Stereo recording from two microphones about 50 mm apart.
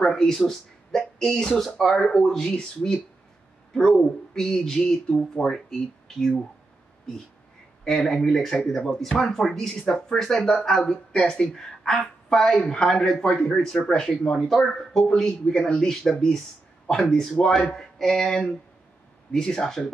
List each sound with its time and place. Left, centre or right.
0.0 s speech: centre
7.8 s a woman's voice: centre